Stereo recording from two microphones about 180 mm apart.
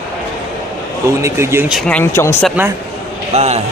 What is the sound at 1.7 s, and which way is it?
Speech, centre (ahead or behind).